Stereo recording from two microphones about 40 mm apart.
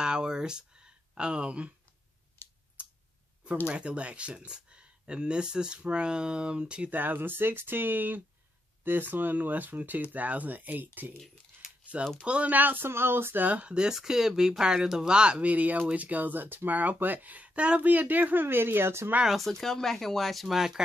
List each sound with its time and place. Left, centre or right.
0.0 s a sound: right
3.6 s speech: right
6.9 s speech: right
11.9 s speech: right
12.4 s speech: right
12.8 s a sound: right
13.4 s speech: right
13.7 s speech: right
13.9 s speech: centre; by 19.1 s right
19.2 s speech: centre